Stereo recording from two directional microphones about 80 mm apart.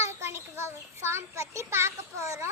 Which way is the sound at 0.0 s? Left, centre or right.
Right.